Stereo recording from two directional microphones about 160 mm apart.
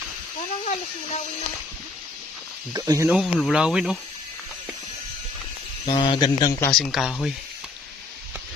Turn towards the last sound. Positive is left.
turn(degrees=0)  # may be behind; listen again after turning